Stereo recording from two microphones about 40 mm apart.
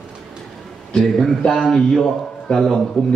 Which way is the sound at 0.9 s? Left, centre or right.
Centre.